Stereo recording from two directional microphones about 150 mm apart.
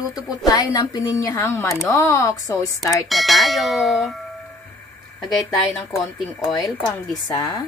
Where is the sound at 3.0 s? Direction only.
Centre (ahead or behind).